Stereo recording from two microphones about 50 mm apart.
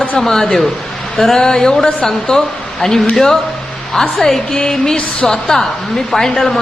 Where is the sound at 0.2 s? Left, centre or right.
Centre.